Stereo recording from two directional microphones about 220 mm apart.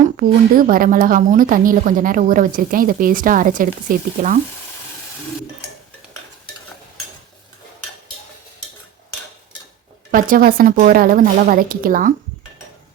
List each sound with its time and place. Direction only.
0.0 s a woman's voice: 40° right (ahead or behind)
10.1 s a woman's voice: 40° right (ahead or behind)